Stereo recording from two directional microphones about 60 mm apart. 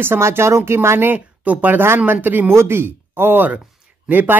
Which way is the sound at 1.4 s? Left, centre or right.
Right.